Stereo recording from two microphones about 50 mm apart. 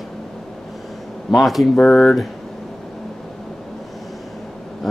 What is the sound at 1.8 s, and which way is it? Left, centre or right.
Speech, centre.